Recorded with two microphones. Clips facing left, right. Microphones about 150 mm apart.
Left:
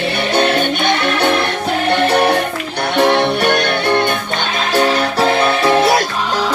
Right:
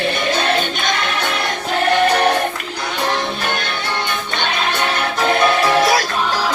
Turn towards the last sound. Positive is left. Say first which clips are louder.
# left 3 dB
turn(degrees=25)  # may be behind; listen again after turning